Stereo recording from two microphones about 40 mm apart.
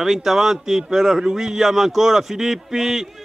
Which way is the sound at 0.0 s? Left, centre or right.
Centre.